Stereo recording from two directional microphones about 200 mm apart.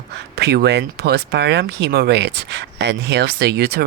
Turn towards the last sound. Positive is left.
turn(degrees=-55)  # may be behind; listen again after turning